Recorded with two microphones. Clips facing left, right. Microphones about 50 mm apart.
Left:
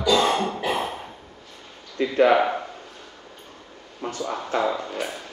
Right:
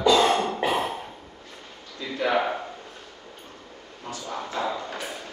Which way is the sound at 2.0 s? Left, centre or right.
Left.